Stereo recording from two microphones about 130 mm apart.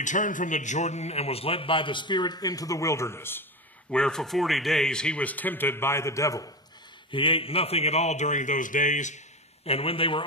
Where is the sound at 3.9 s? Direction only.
5° left (ahead or behind); by 6.5 s 25° left (ahead or behind).